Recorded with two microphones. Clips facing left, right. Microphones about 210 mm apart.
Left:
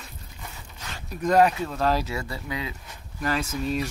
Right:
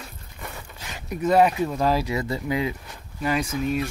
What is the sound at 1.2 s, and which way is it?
Speech, 5° right (ahead or behind).